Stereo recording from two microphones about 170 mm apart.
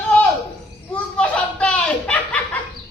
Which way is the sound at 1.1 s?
5° left (ahead or behind).